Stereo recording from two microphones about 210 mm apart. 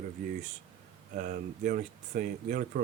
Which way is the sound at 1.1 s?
40° right (ahead or behind).